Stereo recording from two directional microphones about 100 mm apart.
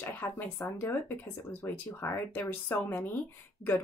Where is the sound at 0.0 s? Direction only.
20° left (ahead or behind).